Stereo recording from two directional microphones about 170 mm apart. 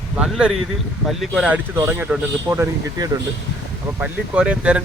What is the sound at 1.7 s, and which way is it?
Speech, 15° right (ahead or behind).